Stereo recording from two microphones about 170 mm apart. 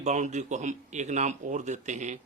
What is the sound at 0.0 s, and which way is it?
Speech, 40° right (ahead or behind).